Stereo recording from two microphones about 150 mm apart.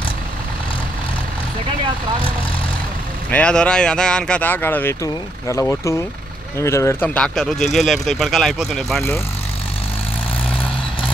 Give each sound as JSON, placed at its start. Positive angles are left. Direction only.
{"t": 3.3, "sound": "speech", "side_deg": 10}
{"t": 7.2, "sound": "speech", "side_deg": 5}